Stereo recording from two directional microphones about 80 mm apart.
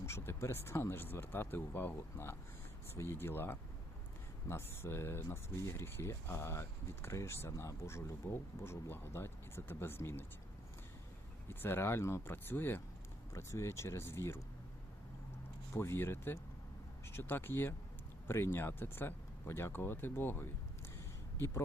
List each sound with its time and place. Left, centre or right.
0.0 s speech: left
11.4 s speech: left
15.7 s speech: left